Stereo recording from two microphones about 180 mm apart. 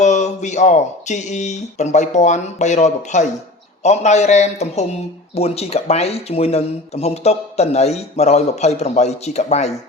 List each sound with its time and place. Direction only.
0.0 s speech: 40° left (ahead or behind)